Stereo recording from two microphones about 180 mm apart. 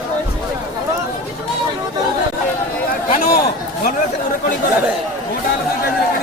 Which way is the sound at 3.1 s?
45° left (ahead or behind).